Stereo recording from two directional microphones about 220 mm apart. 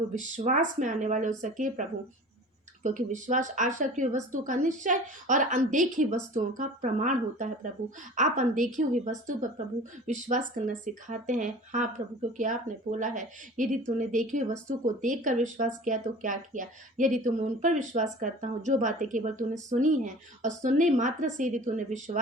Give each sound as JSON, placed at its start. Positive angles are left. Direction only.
{"t": 0.1, "sound": "speech", "side_deg": -35}